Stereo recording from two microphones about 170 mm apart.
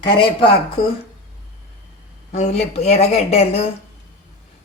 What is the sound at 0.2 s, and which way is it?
Speech, 30° left (ahead or behind).